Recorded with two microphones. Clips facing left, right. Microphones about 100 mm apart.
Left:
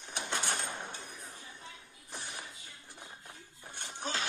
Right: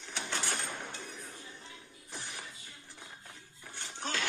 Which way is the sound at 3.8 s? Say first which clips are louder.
Even; 20° left (ahead or behind).